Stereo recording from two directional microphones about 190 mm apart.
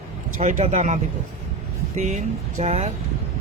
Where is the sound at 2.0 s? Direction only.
40° right (ahead or behind).